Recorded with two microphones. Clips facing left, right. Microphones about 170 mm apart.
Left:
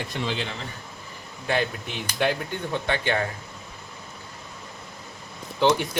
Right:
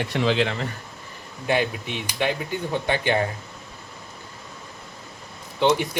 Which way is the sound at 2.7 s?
15° right (ahead or behind).